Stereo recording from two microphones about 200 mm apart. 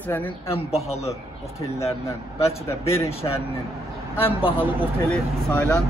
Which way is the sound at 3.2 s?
20° left (ahead or behind).